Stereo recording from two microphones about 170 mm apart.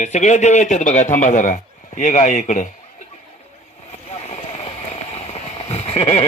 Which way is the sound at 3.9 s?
40° left (ahead or behind).